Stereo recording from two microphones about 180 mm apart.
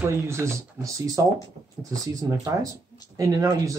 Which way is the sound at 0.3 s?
15° right (ahead or behind).